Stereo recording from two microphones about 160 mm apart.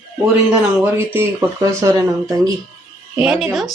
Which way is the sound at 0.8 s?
15° right (ahead or behind).